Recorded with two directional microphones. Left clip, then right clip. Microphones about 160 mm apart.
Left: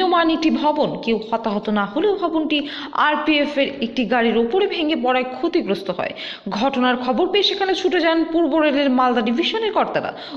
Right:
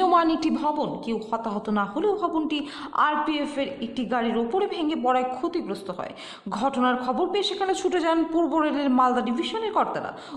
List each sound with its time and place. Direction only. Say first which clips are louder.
0.0 s a woman's voice: left 3 dB; 5° right (ahead or behind)
5.5 s a woman's voice: left 9 dB; 10° left (ahead or behind)